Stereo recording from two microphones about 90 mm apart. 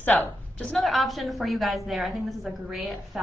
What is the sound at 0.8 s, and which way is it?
A woman's voice, centre (ahead or behind).